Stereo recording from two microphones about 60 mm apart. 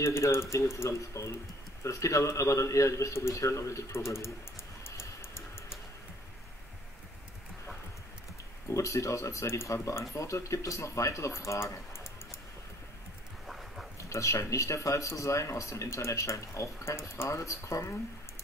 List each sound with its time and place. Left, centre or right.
0.0 s speech: left
0.9 s speech: left
4.8 s music: left
8.6 s speech: left
11.9 s a sound: left
13.5 s a sound: centre
13.9 s speech: left